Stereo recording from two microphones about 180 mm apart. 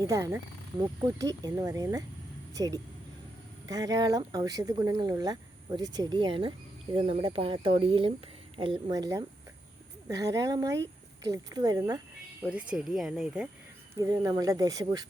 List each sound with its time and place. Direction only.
0.1 s speech: 15° right (ahead or behind)
12.4 s speech: 5° right (ahead or behind)
14.0 s speech: 20° right (ahead or behind)